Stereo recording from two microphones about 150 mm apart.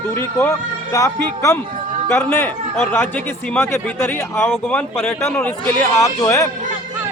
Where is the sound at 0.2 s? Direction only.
20° left (ahead or behind).